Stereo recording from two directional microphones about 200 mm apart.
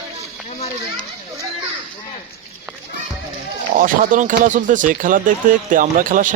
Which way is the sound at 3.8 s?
40° right (ahead or behind).